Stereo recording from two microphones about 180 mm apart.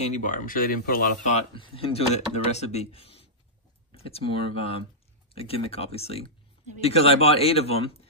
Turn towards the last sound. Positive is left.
turn(degrees=35)  # may be behind; listen again after turning